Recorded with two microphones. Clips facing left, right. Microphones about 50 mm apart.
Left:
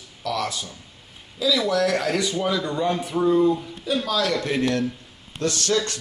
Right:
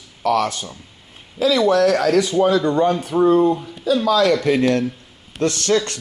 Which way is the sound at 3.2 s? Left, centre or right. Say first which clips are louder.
Right 4 dB; right.